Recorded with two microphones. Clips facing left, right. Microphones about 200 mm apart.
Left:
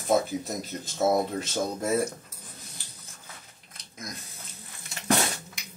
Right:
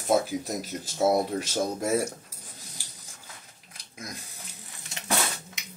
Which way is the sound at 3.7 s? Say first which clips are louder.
Even; 10° right (ahead or behind).